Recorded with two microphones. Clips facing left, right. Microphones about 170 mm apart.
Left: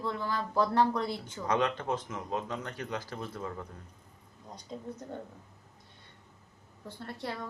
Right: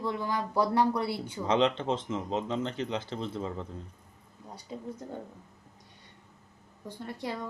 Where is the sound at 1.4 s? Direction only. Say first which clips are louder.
Right 3 dB; 25° right (ahead or behind).